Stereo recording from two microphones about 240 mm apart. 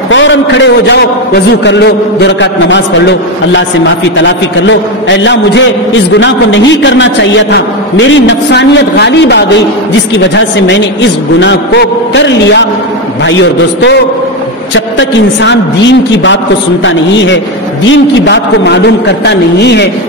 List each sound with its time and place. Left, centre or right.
0.1 s a man's voice: left